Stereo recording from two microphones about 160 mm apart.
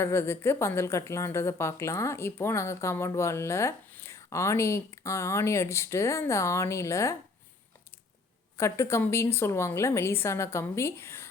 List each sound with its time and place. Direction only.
0.0 s speech: 15° left (ahead or behind)
8.5 s speech: 20° left (ahead or behind)